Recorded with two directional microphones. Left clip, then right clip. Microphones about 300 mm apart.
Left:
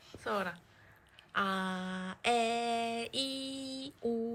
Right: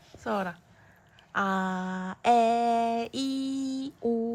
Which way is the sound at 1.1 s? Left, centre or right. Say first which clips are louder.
Right 5 dB; centre.